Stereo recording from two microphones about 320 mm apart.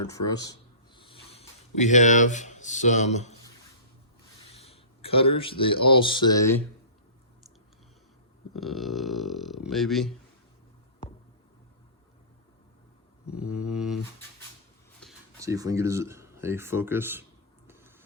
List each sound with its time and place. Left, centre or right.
0.2 s speech: left
0.9 s a sound: centre
4.4 s speech: centre
8.5 s speech: centre
13.2 s speech: centre
15.4 s speech: centre